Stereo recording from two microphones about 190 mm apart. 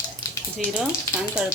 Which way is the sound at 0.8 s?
5° right (ahead or behind).